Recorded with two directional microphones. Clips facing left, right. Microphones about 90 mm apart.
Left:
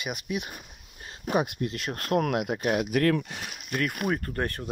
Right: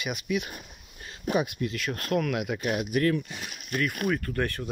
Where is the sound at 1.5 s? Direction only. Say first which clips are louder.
Right 1 dB; 40° left (ahead or behind).